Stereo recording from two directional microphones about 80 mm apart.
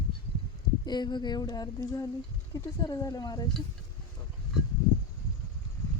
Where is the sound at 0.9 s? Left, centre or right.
Left.